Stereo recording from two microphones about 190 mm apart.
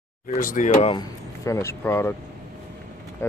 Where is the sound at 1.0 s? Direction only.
15° left (ahead or behind).